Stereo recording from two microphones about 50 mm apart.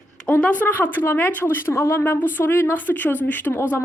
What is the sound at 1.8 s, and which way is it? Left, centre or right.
Speech, left.